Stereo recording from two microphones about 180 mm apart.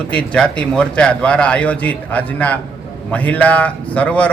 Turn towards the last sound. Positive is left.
turn(degrees=10)  # may be behind; listen again after turning